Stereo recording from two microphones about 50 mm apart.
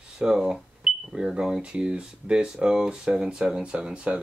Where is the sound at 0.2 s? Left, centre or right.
Centre.